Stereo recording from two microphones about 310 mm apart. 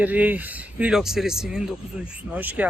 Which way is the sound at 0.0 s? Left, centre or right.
Centre.